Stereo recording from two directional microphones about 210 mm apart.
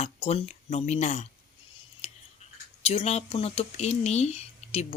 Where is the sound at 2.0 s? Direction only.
30° left (ahead or behind).